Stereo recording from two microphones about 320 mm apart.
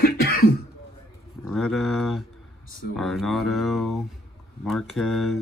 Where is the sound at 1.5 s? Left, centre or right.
Centre.